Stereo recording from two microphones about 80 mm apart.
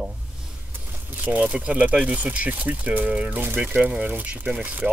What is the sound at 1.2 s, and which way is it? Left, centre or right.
Speech, right.